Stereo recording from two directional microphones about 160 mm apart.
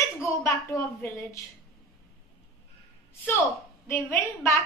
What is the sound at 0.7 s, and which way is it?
Speech, 20° left (ahead or behind).